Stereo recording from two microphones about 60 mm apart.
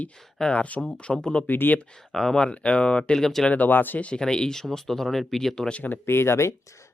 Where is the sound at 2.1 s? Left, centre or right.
Centre.